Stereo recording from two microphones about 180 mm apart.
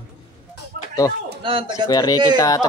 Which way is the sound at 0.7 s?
60° right (ahead or behind).